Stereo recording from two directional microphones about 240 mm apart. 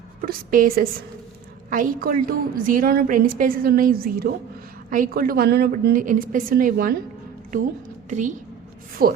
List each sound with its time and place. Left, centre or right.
0.3 s a woman's voice: right
9.0 s a woman's voice: right